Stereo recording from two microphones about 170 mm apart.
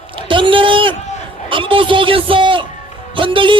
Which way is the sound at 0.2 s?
30° right (ahead or behind).